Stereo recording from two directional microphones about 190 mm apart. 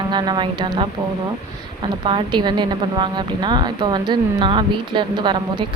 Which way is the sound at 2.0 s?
25° right (ahead or behind).